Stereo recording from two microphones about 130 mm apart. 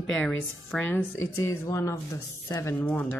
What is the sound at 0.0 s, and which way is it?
Speech, 10° left (ahead or behind).